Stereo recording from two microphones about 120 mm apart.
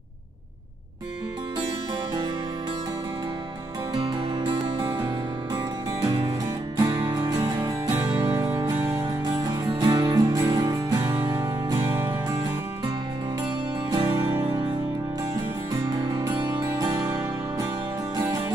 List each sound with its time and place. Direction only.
3.9 s music: 45° right (ahead or behind)
6.0 s music: 45° right (ahead or behind)
6.8 s music: 35° right (ahead or behind)
13.8 s music: 30° right (ahead or behind)
14.4 s music: 45° right (ahead or behind)
15.8 s music: 40° right (ahead or behind)